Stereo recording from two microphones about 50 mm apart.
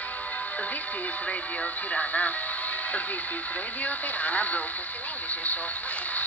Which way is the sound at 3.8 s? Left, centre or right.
Left.